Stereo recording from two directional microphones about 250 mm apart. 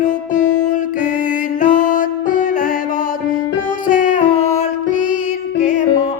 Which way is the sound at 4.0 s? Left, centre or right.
Left.